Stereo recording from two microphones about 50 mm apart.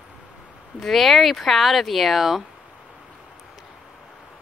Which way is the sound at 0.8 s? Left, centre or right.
Centre.